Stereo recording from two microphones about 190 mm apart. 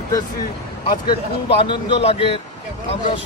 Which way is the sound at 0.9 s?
25° left (ahead or behind).